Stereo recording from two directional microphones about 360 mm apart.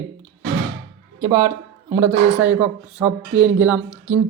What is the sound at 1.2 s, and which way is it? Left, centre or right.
Speech, centre.